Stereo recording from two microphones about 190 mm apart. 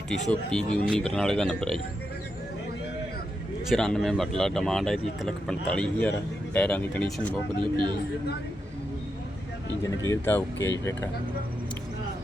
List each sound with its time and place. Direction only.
0.3 s speech: 5° left (ahead or behind)
3.7 s speech: 5° left (ahead or behind)
7.6 s speech: 25° right (ahead or behind)
10.1 s speech: 15° left (ahead or behind)